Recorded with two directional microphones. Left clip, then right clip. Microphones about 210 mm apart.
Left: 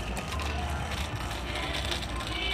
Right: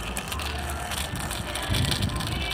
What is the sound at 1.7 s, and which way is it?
Vehicle, 55° right (ahead or behind).